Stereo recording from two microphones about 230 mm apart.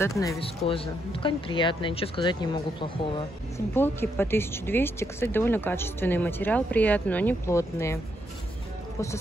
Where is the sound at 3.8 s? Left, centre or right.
Centre.